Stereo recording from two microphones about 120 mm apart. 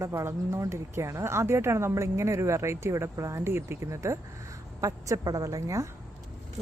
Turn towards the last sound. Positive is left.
turn(degrees=-25)  # may be behind; listen again after turning